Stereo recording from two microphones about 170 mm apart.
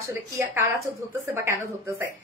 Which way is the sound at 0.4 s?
15° right (ahead or behind).